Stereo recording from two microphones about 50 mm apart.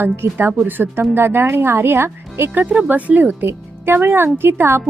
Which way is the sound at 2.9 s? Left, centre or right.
Right.